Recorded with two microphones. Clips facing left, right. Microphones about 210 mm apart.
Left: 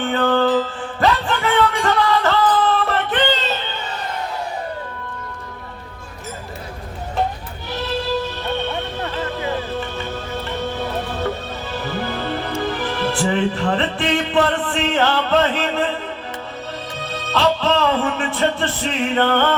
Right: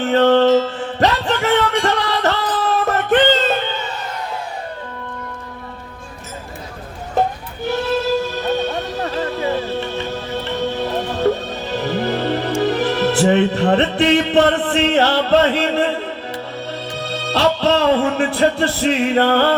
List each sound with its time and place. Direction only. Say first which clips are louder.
0.0 s music: right 5 dB; 40° right (ahead or behind)
8.5 s music: right 3 dB; 40° right (ahead or behind)
11.8 s music: right 6 dB; 40° right (ahead or behind)
17.3 s music: right 2 dB; 40° right (ahead or behind)